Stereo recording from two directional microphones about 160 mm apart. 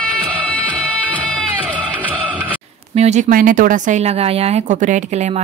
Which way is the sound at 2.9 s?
45° right (ahead or behind).